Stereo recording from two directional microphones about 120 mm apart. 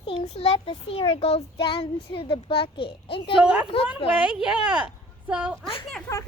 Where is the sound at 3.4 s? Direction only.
10° right (ahead or behind).